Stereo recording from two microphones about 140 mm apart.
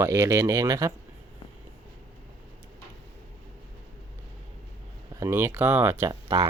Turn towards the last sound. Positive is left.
turn(degrees=-20)  # may be behind; listen again after turning